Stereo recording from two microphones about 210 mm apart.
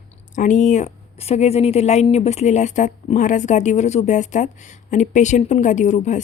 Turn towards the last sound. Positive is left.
turn(degrees=35)  # may be behind; listen again after turning